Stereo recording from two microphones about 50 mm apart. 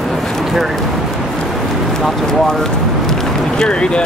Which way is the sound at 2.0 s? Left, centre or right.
Centre.